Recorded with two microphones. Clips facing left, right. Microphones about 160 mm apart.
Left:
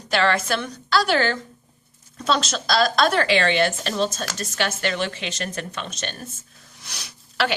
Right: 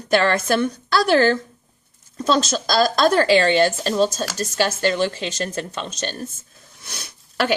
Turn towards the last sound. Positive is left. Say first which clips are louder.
# right 2 dB
turn(degrees=-50)  # may be behind; listen again after turning